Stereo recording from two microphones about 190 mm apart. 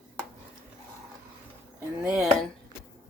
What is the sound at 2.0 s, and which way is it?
Speech, 5° right (ahead or behind).